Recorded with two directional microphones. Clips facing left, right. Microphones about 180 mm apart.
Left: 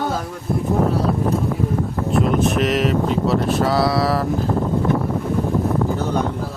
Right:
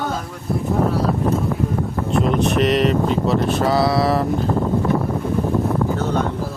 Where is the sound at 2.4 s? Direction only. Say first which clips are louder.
Right 1 dB; centre (ahead or behind).